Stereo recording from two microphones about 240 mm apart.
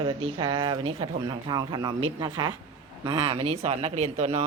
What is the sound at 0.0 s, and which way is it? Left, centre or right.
Speech, centre.